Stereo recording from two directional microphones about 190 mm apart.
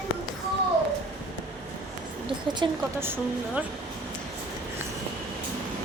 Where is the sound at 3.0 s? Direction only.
10° right (ahead or behind).